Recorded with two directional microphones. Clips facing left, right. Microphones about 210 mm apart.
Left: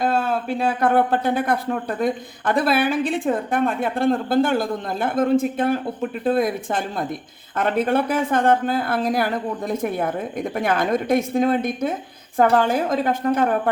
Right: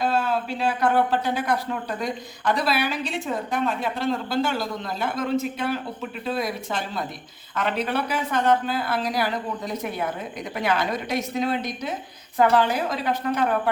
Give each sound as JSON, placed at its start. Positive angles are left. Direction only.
{"t": 0.0, "sound": "speech", "side_deg": 50}